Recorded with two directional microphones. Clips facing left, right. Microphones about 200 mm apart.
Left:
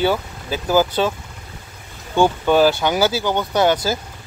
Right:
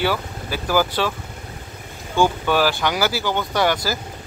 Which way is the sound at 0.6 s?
20° left (ahead or behind).